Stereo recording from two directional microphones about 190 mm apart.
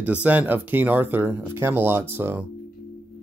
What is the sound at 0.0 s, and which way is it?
Speech, 5° right (ahead or behind).